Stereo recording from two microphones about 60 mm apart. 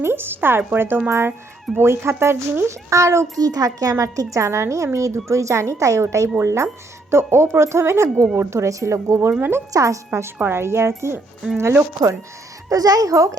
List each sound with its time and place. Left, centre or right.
0.0 s speech: right
2.9 s speech: right
3.3 s a child's voice: right
3.9 s speech: right
9.4 s speech: right
9.7 s speech: right
10.1 s speech: right
12.6 s speech: right